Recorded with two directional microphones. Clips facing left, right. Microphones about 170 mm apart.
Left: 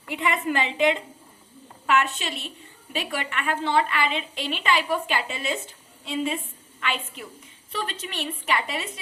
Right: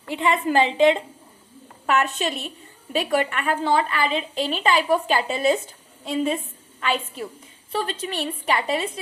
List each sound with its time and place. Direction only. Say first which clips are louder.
0.1 s a woman's voice: right 4 dB; 30° right (ahead or behind)